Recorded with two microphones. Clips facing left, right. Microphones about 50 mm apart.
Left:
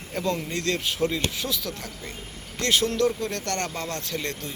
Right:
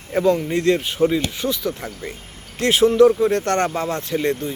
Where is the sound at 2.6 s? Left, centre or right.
Right.